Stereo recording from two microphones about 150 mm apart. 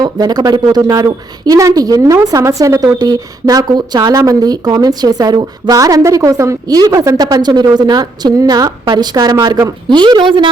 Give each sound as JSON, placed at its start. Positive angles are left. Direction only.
{"t": 0.0, "sound": "a woman's voice", "side_deg": -25}